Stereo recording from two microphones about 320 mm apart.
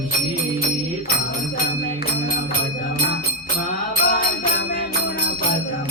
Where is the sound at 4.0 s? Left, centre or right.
Left.